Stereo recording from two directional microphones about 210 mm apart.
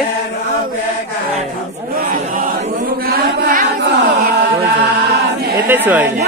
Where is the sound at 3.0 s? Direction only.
45° right (ahead or behind).